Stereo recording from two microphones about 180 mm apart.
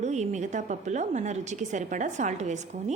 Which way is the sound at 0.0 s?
40° right (ahead or behind).